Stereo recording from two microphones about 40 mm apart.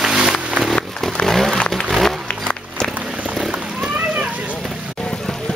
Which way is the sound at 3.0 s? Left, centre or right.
Right.